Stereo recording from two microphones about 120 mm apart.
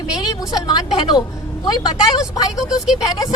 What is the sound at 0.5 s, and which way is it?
Speech, 35° left (ahead or behind).